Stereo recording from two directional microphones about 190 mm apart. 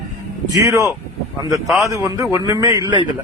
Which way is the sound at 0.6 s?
15° right (ahead or behind).